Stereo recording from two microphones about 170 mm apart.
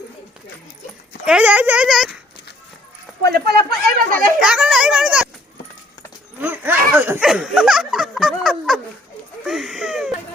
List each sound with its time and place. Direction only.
1.2 s speech: 5° right (ahead or behind)
3.2 s speech: 70° right (ahead or behind)
4.4 s speech: 5° right (ahead or behind)
6.4 s speech: 10° right (ahead or behind)